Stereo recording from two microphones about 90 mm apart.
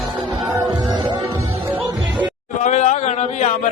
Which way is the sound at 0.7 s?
60° right (ahead or behind).